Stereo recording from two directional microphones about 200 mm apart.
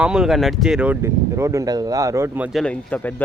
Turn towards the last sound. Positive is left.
turn(degrees=5)  # may be behind; listen again after turning